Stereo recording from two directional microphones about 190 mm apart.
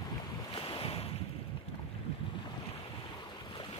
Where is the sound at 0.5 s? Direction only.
30° left (ahead or behind).